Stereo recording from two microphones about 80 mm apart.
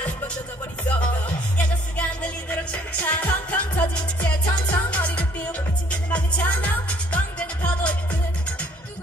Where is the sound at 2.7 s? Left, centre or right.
Left.